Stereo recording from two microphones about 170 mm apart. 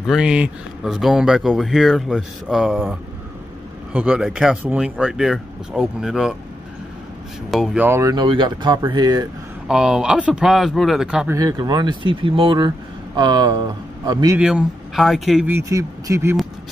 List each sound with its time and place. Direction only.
0.0 s speech: 5° right (ahead or behind)
7.5 s speech: 5° right (ahead or behind); by 9.3 s 25° right (ahead or behind)
9.7 s speech: 5° right (ahead or behind)
11.2 s speech: 20° right (ahead or behind)
14.4 s speech: 5° right (ahead or behind)
15.5 s speech: 15° right (ahead or behind)